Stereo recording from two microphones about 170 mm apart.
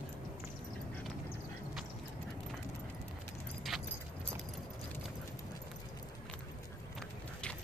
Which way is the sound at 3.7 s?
Centre (ahead or behind).